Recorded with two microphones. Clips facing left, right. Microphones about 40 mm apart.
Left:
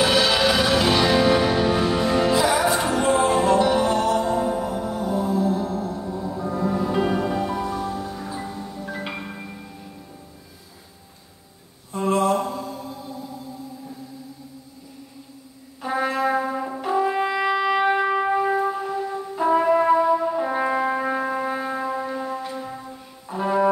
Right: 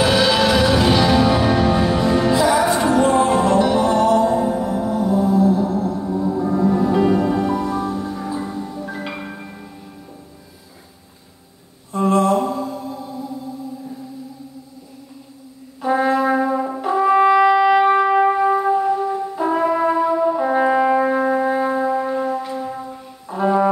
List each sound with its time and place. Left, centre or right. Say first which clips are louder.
0.0 s music: right 3 dB; centre
5.9 s music: right 8 dB; centre
6.6 s music: right 5 dB; centre
11.9 s a sound: right 4 dB; centre
12.4 s mantra: right 6 dB; centre
15.8 s brass instrument: right 6 dB; centre
17.5 s music: right 7 dB; centre